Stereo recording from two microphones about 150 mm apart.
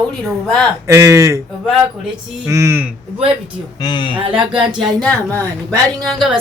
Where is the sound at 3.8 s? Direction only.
30° left (ahead or behind).